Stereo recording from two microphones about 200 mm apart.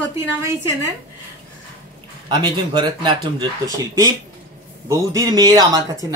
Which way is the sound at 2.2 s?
20° right (ahead or behind).